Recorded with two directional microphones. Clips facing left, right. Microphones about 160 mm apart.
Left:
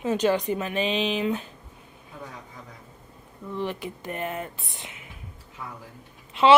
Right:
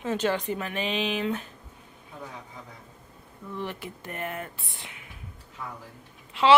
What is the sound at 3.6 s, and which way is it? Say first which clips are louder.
Speech: left 5 dB; 20° left (ahead or behind).